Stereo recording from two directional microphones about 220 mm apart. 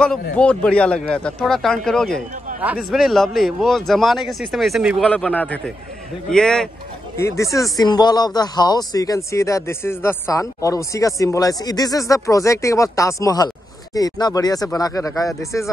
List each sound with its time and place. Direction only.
0.0 s a man's voice: 5° left (ahead or behind)
7.2 s speech: 15° left (ahead or behind)